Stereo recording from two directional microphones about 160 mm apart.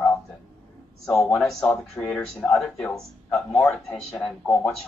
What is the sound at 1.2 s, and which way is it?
Speech, centre (ahead or behind).